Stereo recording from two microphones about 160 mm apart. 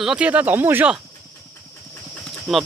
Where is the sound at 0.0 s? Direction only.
5° right (ahead or behind).